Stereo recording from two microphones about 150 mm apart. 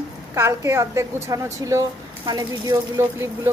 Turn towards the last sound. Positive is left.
turn(degrees=-15)  # may be behind; listen again after turning